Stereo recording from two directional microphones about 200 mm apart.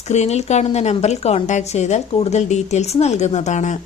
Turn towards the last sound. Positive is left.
turn(degrees=35)  # may be behind; listen again after turning